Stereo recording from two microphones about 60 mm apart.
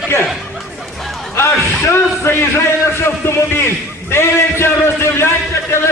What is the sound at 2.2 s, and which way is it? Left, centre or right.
A man's voice, left.